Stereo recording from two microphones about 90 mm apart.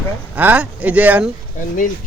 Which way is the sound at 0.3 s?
15° right (ahead or behind).